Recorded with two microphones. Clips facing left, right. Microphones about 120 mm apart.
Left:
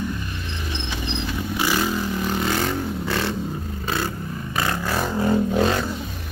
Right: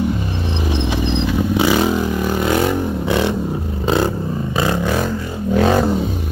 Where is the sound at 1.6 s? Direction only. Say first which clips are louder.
Right 6 dB; 75° right (ahead or behind).